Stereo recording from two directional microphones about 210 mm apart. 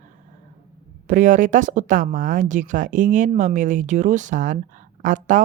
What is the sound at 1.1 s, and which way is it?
Speech, 40° right (ahead or behind).